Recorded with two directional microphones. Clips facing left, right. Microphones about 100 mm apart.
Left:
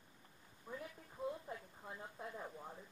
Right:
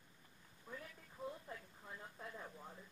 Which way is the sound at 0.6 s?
15° left (ahead or behind).